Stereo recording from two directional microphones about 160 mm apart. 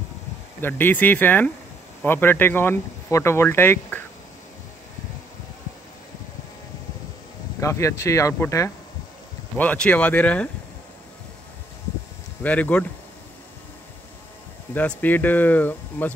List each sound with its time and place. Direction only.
0.6 s speech: 15° left (ahead or behind)
7.6 s speech: 20° left (ahead or behind)
12.4 s speech: 10° left (ahead or behind)
14.7 s speech: 10° left (ahead or behind)